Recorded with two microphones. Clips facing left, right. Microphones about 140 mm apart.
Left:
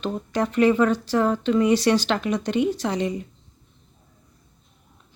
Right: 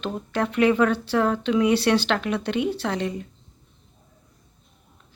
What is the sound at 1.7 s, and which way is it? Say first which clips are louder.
A woman's voice: left 1 dB; 10° left (ahead or behind).